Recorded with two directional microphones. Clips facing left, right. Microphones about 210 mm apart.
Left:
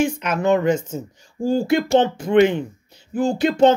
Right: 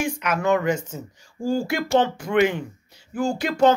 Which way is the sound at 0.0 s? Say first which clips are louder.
Left 4 dB; 25° left (ahead or behind).